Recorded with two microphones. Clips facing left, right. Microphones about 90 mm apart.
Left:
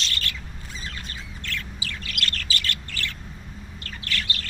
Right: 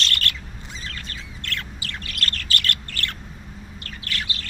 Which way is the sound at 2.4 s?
60° right (ahead or behind).